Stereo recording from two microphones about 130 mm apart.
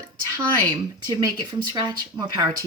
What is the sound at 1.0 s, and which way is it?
Speech, 30° right (ahead or behind).